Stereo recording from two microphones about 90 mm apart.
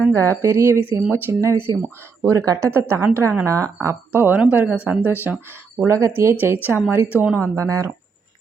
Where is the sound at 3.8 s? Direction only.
25° right (ahead or behind).